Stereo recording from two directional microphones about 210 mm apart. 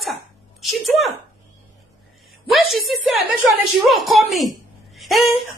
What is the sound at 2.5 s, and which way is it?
A woman's voice, centre (ahead or behind).